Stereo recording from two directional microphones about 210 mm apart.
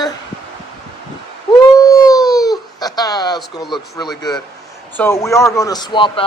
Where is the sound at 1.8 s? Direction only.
15° left (ahead or behind).